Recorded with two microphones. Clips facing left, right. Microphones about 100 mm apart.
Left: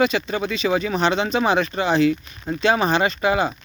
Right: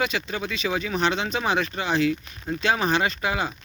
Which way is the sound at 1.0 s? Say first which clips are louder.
Left 4 dB; 5° right (ahead or behind).